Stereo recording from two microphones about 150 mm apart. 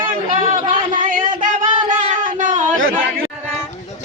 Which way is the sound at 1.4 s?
60° right (ahead or behind).